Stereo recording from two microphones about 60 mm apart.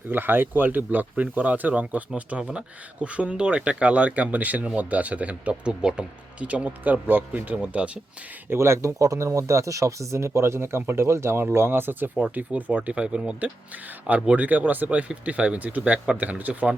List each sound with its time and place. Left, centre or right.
0.1 s speech: right
7.5 s speech: centre
8.4 s speech: right